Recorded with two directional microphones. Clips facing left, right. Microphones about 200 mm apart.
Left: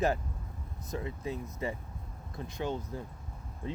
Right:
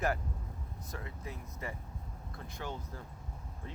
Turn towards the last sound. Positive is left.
turn(degrees=20)  # may be behind; listen again after turning